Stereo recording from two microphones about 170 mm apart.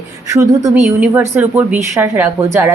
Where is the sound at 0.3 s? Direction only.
20° right (ahead or behind).